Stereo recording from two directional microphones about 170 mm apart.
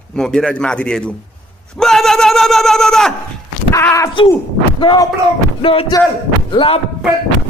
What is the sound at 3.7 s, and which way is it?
Speech, 20° left (ahead or behind).